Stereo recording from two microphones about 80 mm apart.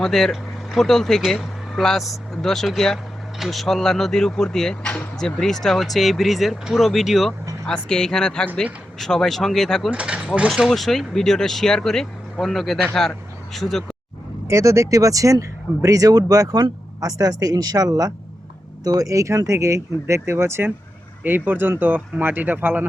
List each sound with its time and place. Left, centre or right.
0.0 s speech: centre
7.9 s speech: centre
9.9 s speech: centre
10.7 s speech: centre
14.4 s speech: right